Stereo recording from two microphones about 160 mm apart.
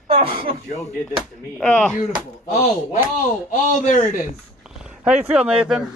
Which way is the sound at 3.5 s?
50° left (ahead or behind).